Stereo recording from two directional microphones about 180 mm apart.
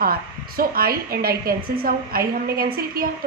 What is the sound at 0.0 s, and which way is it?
A woman's voice, 55° right (ahead or behind).